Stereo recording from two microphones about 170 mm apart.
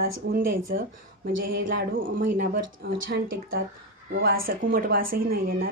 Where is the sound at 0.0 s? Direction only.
60° right (ahead or behind).